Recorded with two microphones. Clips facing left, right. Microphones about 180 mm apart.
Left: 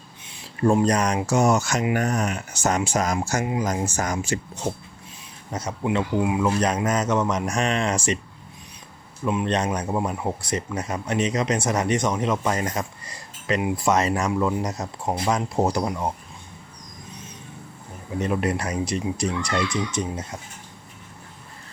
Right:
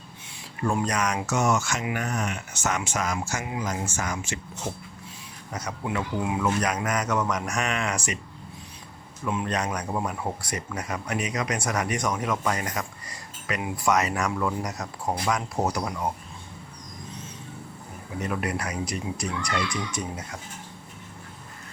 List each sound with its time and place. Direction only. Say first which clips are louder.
0.6 s speech: left 6 dB; 30° left (ahead or behind)
4.7 s a man's voice: left 6 dB; 20° left (ahead or behind)
6.5 s a man's voice: left 4 dB; 30° left (ahead or behind)
9.2 s a man's voice: left 4 dB; 20° left (ahead or behind)
18.2 s a man's voice: left 5 dB; 25° left (ahead or behind)